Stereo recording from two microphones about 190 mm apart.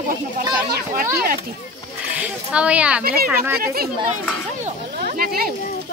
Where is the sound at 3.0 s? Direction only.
50° right (ahead or behind).